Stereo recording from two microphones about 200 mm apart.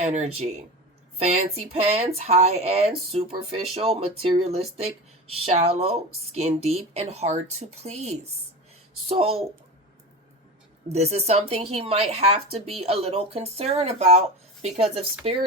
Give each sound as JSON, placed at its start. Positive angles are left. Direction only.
{"t": 0.0, "sound": "a woman's voice", "side_deg": -35}
{"t": 10.8, "sound": "a woman's voice", "side_deg": -30}